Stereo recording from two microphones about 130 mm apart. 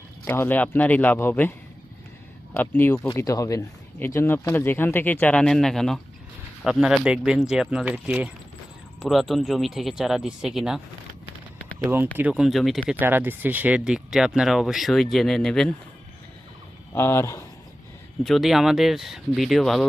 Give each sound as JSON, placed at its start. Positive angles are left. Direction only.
{"t": 0.3, "sound": "speech", "side_deg": 15}
{"t": 3.2, "sound": "speech", "side_deg": 25}
{"t": 12.1, "sound": "speech", "side_deg": -10}
{"t": 12.9, "sound": "speech", "side_deg": -15}
{"t": 16.9, "sound": "speech", "side_deg": 20}
{"t": 18.2, "sound": "speech", "side_deg": 0}